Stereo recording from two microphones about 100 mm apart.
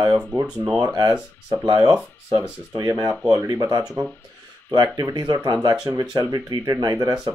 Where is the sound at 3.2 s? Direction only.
25° right (ahead or behind).